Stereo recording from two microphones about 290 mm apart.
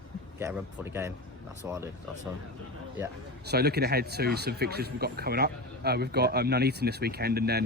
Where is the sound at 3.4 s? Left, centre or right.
Right.